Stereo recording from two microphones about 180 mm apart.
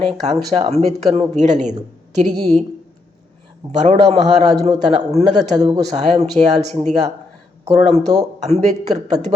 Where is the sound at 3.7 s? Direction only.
40° right (ahead or behind).